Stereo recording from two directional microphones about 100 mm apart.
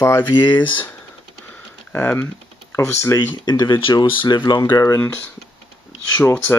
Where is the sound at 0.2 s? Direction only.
50° left (ahead or behind).